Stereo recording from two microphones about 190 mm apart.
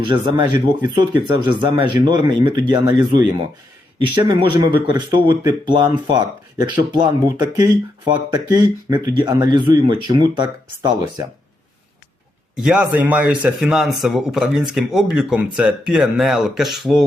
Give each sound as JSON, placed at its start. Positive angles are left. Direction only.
{"t": 0.0, "sound": "speech", "side_deg": -25}
{"t": 12.5, "sound": "speech", "side_deg": 0}